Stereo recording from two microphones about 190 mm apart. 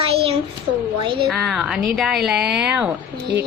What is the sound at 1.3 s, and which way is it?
A woman's voice, centre (ahead or behind).